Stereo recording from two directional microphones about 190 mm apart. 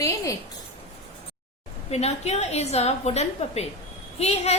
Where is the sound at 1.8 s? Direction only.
35° left (ahead or behind).